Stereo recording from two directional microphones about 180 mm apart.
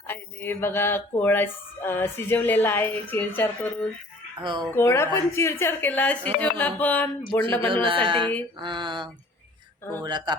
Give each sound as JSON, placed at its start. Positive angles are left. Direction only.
{"t": 0.1, "sound": "speech", "side_deg": 10}
{"t": 4.4, "sound": "a woman's voice", "side_deg": -25}
{"t": 4.7, "sound": "speech", "side_deg": 15}
{"t": 7.7, "sound": "a woman's voice", "side_deg": -30}